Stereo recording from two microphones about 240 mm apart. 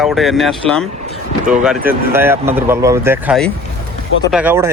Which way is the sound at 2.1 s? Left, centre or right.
Centre.